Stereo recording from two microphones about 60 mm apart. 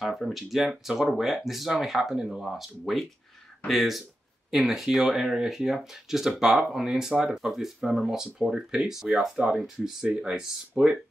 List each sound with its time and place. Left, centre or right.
0.0 s speech: centre
10.0 s speech: centre